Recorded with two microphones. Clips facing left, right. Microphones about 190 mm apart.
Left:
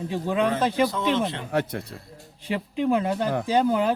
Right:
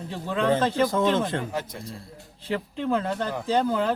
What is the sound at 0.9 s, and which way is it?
Speech, 45° right (ahead or behind).